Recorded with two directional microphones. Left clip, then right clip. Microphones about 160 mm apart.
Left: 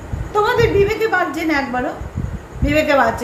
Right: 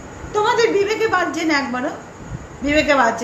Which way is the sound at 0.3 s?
5° right (ahead or behind).